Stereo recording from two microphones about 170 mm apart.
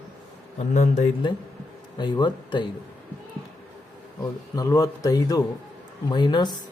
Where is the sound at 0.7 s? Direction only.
45° left (ahead or behind).